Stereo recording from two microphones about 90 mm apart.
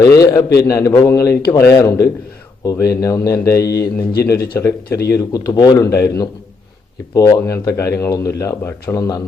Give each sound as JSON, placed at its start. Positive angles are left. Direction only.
{"t": 0.0, "sound": "a man's voice", "side_deg": 40}
{"t": 5.3, "sound": "speech", "side_deg": 50}
{"t": 5.8, "sound": "a man's voice", "side_deg": 35}